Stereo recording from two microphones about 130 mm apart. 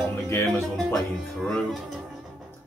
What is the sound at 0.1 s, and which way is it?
Music, 20° left (ahead or behind).